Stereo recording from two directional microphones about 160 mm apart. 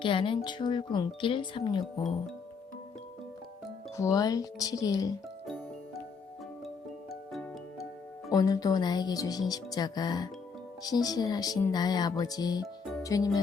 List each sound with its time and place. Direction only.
0.0 s speech: 30° left (ahead or behind)
3.9 s speech: 20° left (ahead or behind)
5.5 s music: centre (ahead or behind)
7.1 s music: centre (ahead or behind)
8.3 s speech: 25° left (ahead or behind)
13.0 s music: 20° left (ahead or behind)